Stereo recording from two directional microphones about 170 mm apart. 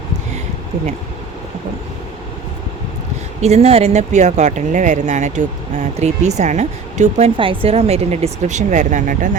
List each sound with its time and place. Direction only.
3.4 s speech: 40° right (ahead or behind)
7.3 s speech: 30° right (ahead or behind); by 9.4 s 45° right (ahead or behind)